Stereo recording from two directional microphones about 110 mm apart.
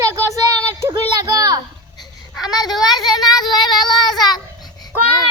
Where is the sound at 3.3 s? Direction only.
40° left (ahead or behind).